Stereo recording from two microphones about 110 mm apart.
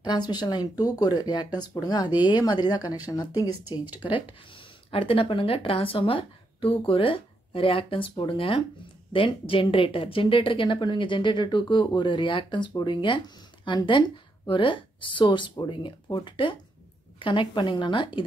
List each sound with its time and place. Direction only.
0.0 s speech: 40° left (ahead or behind)
3.9 s speech: 45° left (ahead or behind)